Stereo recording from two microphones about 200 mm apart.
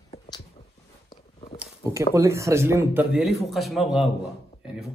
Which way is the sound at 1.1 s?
30° left (ahead or behind).